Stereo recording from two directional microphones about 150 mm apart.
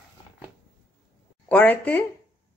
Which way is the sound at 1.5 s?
10° left (ahead or behind).